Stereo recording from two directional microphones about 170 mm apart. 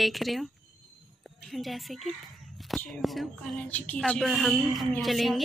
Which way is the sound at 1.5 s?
Centre (ahead or behind).